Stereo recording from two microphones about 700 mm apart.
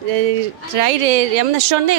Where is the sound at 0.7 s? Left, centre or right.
Right.